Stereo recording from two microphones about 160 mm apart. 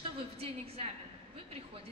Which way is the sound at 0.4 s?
35° right (ahead or behind).